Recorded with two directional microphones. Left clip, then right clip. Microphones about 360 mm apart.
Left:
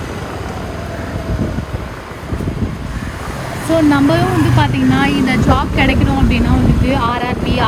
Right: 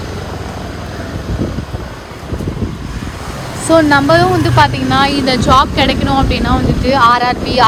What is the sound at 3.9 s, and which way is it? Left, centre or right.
Speech, right.